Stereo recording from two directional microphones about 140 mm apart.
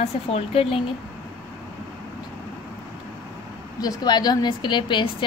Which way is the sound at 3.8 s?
30° left (ahead or behind).